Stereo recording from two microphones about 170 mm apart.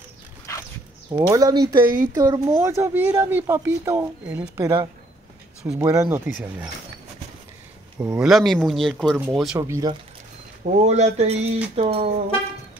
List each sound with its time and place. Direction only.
1.1 s a woman's voice: 20° right (ahead or behind)
8.0 s speech: 5° right (ahead or behind)
9.6 s speech: 20° right (ahead or behind)
10.6 s speech: 40° right (ahead or behind)